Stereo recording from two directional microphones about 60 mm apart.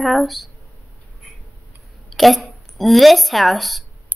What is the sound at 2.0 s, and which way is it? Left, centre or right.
Speech, centre.